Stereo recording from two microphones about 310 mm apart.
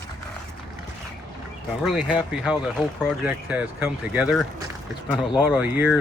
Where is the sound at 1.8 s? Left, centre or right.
Centre.